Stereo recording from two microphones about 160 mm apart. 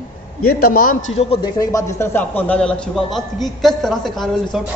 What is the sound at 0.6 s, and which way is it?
Speech, 65° left (ahead or behind).